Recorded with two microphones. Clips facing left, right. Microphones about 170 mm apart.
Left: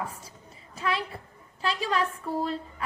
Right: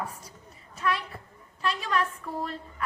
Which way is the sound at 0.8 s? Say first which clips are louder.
Even; 30° left (ahead or behind).